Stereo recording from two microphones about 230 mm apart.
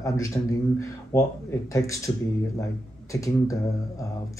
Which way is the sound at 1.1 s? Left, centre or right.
Centre.